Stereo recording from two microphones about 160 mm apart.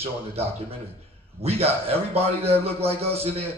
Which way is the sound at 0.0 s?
40° right (ahead or behind).